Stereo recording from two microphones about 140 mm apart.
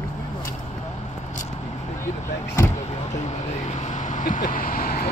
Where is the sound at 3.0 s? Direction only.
55° left (ahead or behind); by 5.1 s 90° left.